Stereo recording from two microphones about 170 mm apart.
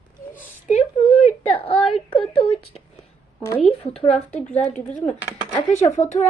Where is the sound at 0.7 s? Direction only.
40° left (ahead or behind).